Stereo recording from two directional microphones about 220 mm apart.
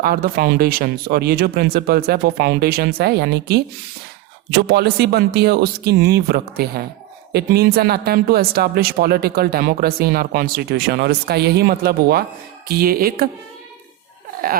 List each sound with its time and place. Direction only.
0.0 s speech: 45° right (ahead or behind)